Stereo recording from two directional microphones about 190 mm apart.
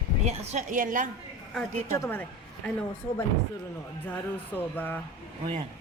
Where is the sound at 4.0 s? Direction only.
10° left (ahead or behind).